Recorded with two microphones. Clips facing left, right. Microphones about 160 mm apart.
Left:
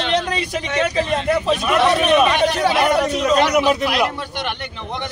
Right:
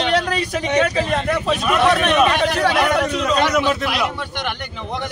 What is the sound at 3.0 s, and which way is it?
Speech, 35° left (ahead or behind).